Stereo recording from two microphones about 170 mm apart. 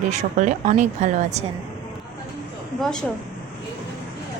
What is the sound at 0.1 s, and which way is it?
A woman's voice, 45° right (ahead or behind).